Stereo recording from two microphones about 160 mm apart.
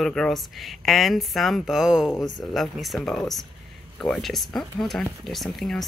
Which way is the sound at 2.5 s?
Centre (ahead or behind).